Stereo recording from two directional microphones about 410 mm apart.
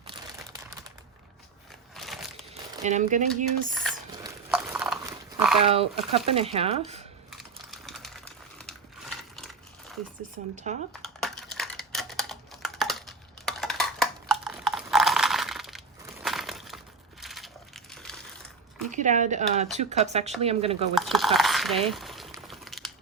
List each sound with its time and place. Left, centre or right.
2.8 s speech: centre
4.2 s dog: centre
5.5 s speech: centre
7.3 s crumpling: centre
10.5 s speech: centre
11.0 s typing: centre
18.9 s speech: centre
20.9 s a sound: centre